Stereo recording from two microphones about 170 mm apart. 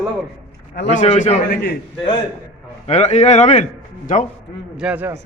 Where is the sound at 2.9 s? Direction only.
40° left (ahead or behind).